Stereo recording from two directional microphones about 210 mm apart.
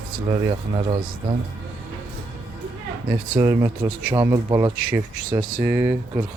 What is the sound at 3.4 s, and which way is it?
Speech, 15° right (ahead or behind).